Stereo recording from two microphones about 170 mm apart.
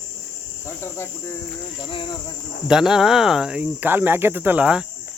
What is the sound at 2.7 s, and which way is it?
Speech, 5° right (ahead or behind).